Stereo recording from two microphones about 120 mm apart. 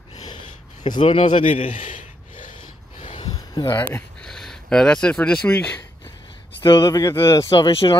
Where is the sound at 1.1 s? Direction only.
75° left (ahead or behind).